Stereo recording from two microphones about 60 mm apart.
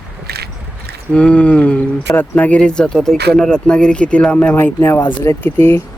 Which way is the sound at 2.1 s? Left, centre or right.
Left.